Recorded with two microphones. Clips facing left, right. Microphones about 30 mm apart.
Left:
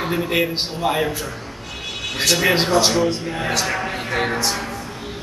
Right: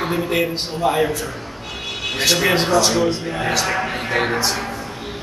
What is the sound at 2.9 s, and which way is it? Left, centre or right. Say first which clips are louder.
A man's voice: right 1 dB; centre.